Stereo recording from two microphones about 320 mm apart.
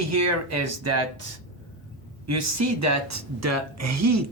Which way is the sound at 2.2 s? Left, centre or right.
Right.